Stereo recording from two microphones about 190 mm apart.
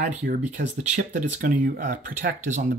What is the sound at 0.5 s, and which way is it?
Speech, 40° right (ahead or behind).